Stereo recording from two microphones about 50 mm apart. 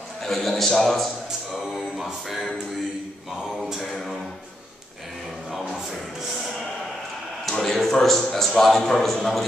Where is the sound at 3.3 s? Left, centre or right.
Centre.